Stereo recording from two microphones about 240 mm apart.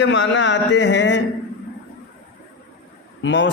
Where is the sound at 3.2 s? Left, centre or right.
Left.